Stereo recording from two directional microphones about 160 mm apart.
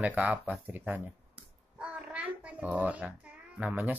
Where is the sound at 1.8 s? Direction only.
10° right (ahead or behind).